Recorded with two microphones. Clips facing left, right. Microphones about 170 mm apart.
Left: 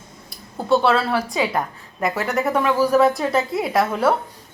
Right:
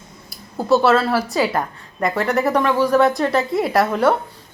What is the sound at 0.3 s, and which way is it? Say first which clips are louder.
A woman's voice: right 2 dB; 5° right (ahead or behind).